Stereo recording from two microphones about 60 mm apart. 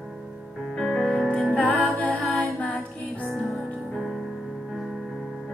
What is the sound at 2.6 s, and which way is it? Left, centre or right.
Music, left.